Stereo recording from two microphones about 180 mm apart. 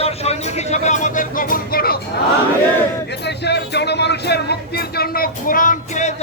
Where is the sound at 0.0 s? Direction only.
35° left (ahead or behind); by 2.0 s 55° left (ahead or behind).